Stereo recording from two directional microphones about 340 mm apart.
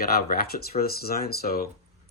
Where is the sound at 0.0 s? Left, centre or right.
Left.